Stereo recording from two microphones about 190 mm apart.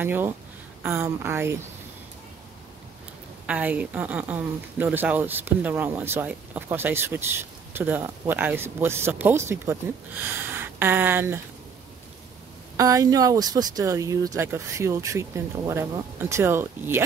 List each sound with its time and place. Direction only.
0.0 s speech: 10° right (ahead or behind)
3.4 s speech: 5° right (ahead or behind)
12.7 s speech: 20° right (ahead or behind)